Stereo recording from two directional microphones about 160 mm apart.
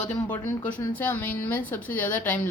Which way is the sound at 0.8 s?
10° left (ahead or behind).